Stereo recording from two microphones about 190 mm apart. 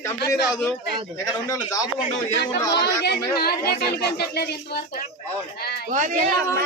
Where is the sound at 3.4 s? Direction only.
55° left (ahead or behind).